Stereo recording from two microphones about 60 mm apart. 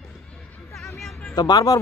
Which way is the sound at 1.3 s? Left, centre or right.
Left.